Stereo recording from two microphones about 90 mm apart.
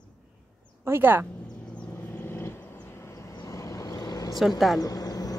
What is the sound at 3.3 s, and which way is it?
Vehicle, 40° left (ahead or behind).